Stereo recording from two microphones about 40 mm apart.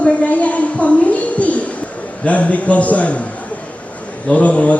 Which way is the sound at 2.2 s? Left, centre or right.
Left.